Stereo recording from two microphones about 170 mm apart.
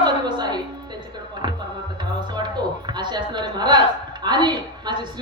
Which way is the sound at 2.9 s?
25° right (ahead or behind).